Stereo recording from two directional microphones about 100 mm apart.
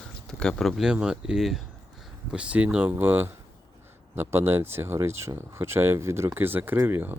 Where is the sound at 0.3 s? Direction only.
5° left (ahead or behind).